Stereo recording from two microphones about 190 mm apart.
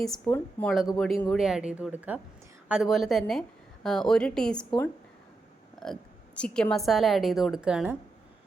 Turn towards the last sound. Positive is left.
turn(degrees=-5)  # may be behind; listen again after turning